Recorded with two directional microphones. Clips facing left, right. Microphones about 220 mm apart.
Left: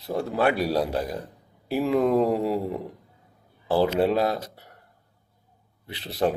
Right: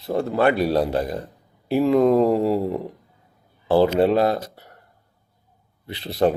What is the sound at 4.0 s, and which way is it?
Speech, 5° left (ahead or behind).